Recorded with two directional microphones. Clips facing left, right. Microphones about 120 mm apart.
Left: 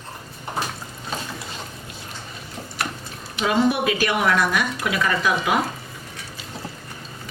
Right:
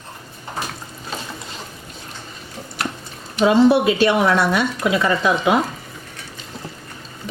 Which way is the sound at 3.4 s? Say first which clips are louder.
Right 7 dB; 25° right (ahead or behind).